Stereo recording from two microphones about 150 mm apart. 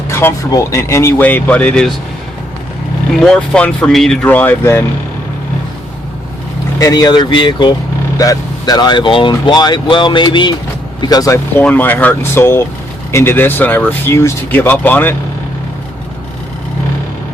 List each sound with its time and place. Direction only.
0.1 s speech: 15° left (ahead or behind)
3.2 s speech: 5° left (ahead or behind)
6.7 s speech: 25° left (ahead or behind)
11.6 s speech: 10° left (ahead or behind)